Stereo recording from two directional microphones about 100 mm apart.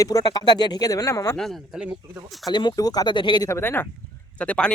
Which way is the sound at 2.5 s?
50° left (ahead or behind).